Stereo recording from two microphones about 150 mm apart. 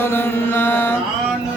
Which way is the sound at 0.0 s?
15° left (ahead or behind).